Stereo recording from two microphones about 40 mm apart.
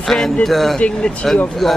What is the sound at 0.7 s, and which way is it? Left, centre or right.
Speech, left.